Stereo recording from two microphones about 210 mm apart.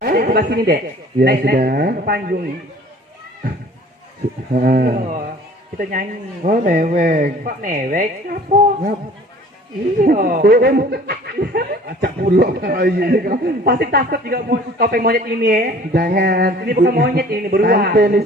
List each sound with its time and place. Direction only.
0.0 s a sound: 45° right (ahead or behind)
1.2 s speech: 50° right (ahead or behind)
4.5 s speech: 45° right (ahead or behind)
10.0 s speech: 40° right (ahead or behind)